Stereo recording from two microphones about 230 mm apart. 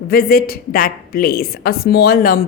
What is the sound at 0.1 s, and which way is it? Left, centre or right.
A woman's voice, left.